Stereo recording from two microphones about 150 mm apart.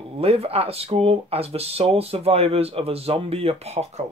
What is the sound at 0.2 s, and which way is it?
Speech, 40° right (ahead or behind).